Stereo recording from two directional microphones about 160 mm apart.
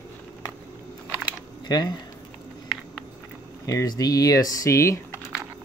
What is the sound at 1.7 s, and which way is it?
Speech, 25° left (ahead or behind).